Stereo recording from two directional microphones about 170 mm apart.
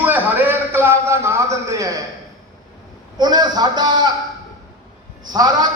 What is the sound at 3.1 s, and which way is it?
Speech, 25° right (ahead or behind).